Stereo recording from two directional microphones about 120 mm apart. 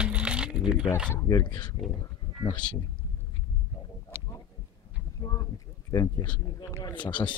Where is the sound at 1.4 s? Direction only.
40° left (ahead or behind).